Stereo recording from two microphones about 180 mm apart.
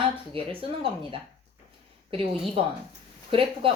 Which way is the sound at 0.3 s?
30° right (ahead or behind).